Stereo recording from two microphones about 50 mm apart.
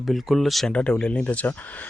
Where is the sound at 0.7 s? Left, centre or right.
Left.